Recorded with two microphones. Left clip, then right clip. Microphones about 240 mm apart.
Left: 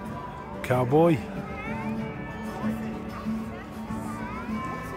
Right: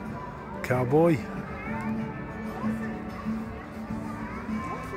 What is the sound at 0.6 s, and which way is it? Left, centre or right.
Speech, centre.